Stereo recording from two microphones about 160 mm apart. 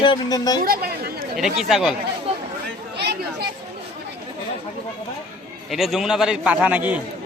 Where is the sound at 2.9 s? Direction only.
90° right.